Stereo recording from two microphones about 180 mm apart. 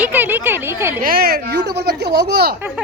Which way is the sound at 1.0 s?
55° right (ahead or behind).